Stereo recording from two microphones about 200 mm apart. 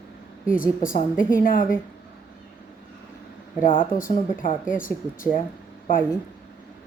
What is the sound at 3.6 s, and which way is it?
Speech, 45° left (ahead or behind).